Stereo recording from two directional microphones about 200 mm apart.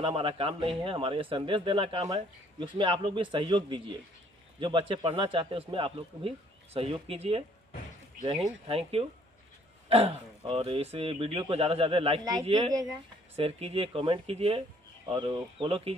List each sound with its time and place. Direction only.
0.0 s speech: 25° right (ahead or behind)
8.6 s speech: 30° right (ahead or behind)